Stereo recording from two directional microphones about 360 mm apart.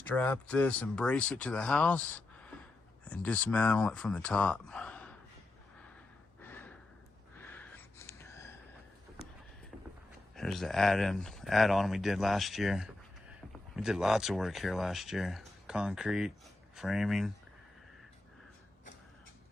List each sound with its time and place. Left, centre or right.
0.1 s speech: centre
6.4 s gasp: centre
7.3 s a sound: centre
10.3 s speech: centre